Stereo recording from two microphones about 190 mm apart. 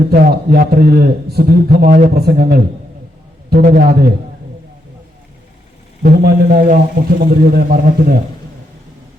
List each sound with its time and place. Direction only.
0.1 s a man's voice: 55° right (ahead or behind)
3.6 s a man's voice: 50° right (ahead or behind)
6.0 s a man's voice: 50° right (ahead or behind)